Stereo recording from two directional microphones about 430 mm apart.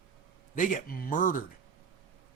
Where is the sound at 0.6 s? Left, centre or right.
Centre.